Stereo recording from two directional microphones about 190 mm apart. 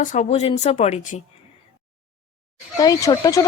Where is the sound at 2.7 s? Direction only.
15° left (ahead or behind).